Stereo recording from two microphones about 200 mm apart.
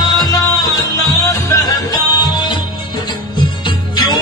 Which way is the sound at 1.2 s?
15° left (ahead or behind).